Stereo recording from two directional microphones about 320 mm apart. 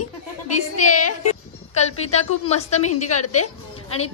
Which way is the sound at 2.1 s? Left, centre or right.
Left.